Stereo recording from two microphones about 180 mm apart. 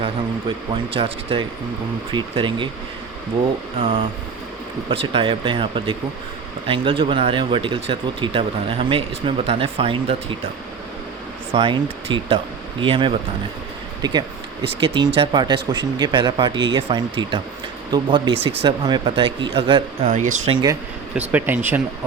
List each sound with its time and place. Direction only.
0.9 s speech: 30° right (ahead or behind)
3.8 s speech: 30° right (ahead or behind)
11.5 s speech: 30° right (ahead or behind)
20.5 s speech: 25° right (ahead or behind)
21.2 s speech: 10° right (ahead or behind)